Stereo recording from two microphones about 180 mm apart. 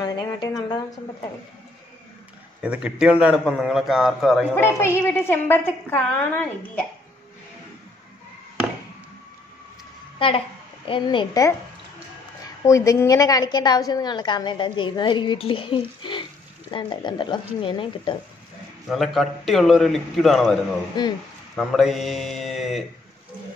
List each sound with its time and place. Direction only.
0.0 s speech: 20° left (ahead or behind)
2.6 s a man's voice: 5° right (ahead or behind)
4.6 s a woman's voice: 15° left (ahead or behind)
10.1 s a woman's voice: 30° left (ahead or behind)
12.6 s a woman's voice: 15° left (ahead or behind)
16.0 s frying: 25° left (ahead or behind)
16.7 s a woman's voice: 25° left (ahead or behind)
18.9 s a man's voice: centre (ahead or behind)
21.0 s a woman's voice: 25° left (ahead or behind)
21.5 s a man's voice: centre (ahead or behind)